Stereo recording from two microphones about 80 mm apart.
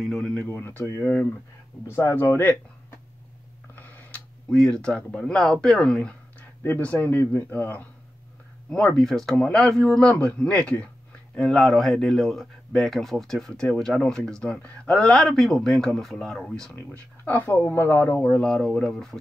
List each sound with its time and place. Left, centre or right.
0.0 s speech: centre
0.6 s speech: left
3.7 s a sound: left
4.5 s speech: centre
6.9 s speech: left
8.6 s speech: centre
16.9 s speech: left
18.2 s speech: centre